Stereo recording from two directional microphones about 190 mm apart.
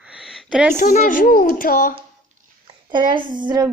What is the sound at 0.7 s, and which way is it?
Speech, 40° left (ahead or behind).